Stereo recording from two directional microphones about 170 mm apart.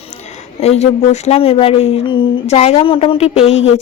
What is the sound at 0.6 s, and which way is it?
Speech, 40° left (ahead or behind).